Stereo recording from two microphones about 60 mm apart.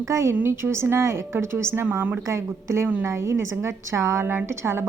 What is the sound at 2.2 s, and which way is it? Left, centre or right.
A woman's voice, right.